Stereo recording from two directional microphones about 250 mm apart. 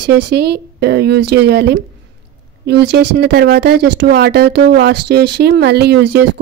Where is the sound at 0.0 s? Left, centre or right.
Right.